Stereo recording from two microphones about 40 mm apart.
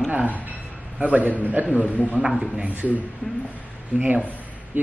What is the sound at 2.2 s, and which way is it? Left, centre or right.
Speech, centre.